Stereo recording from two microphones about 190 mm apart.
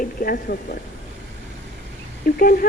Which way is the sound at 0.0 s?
50° left (ahead or behind).